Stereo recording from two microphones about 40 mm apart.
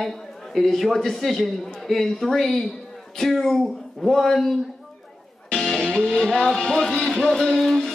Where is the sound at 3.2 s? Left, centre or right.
Centre.